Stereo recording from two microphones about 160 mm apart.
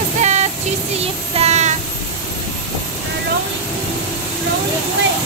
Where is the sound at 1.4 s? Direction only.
45° right (ahead or behind).